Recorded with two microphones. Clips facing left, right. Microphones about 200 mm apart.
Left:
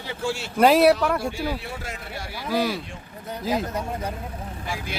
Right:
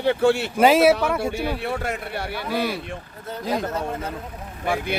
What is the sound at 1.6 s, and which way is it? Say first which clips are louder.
Speech: right 8 dB; 60° right (ahead or behind).